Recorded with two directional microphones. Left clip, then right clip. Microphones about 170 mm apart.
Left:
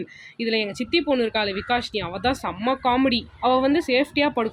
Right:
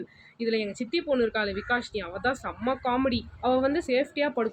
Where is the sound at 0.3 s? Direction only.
40° left (ahead or behind).